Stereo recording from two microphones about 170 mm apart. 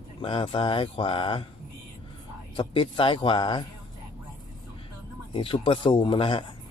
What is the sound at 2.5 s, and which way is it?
A man's voice, 30° left (ahead or behind).